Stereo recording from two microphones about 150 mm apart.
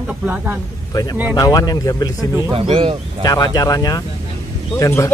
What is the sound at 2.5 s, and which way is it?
Speech, 40° right (ahead or behind).